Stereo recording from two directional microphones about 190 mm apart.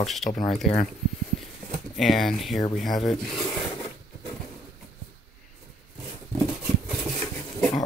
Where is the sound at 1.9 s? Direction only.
Centre (ahead or behind).